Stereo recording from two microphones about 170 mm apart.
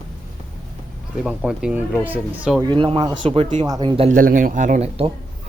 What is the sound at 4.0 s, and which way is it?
Speech, 50° right (ahead or behind).